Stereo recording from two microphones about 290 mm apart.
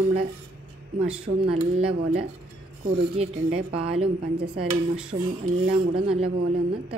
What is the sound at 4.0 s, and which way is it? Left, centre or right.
Speech, centre.